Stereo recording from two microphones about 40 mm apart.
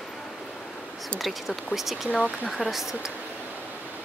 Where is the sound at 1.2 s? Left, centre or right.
Centre.